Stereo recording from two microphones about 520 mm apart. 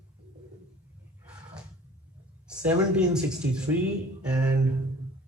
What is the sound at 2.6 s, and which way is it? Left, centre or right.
Speech, centre.